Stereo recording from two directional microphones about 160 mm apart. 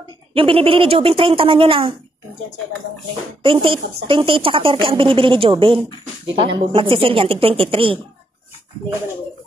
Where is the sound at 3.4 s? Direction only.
35° right (ahead or behind).